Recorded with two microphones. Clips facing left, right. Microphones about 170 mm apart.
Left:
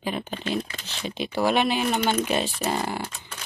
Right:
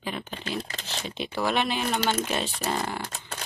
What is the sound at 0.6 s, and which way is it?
Speech, 40° right (ahead or behind).